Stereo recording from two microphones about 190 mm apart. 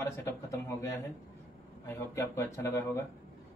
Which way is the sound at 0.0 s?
15° left (ahead or behind).